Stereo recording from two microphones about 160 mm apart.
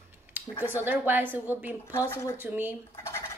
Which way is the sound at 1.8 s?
15° left (ahead or behind).